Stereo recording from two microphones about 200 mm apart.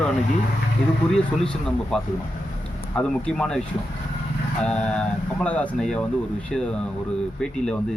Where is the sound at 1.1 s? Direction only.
Centre (ahead or behind).